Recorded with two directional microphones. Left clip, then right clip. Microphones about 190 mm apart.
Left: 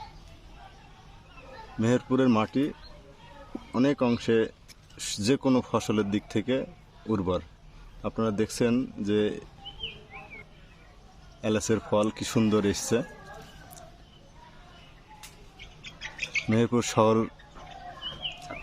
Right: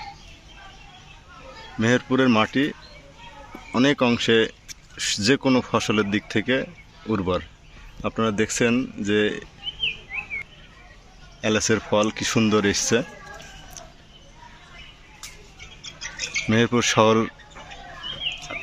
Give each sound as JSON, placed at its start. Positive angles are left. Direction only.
{"t": 1.8, "sound": "speech", "side_deg": 0}
{"t": 3.8, "sound": "speech", "side_deg": 0}
{"t": 11.3, "sound": "speech", "side_deg": 5}
{"t": 15.8, "sound": "mouse", "side_deg": -50}
{"t": 16.5, "sound": "speech", "side_deg": 5}
{"t": 18.3, "sound": "a sound", "side_deg": 30}